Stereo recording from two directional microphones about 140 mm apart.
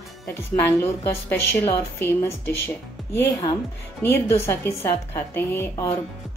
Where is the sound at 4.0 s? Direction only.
15° left (ahead or behind).